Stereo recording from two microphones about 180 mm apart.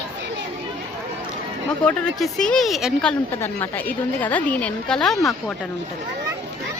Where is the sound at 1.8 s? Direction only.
5° left (ahead or behind).